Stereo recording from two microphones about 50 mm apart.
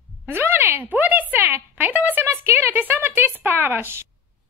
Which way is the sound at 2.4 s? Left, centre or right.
Right.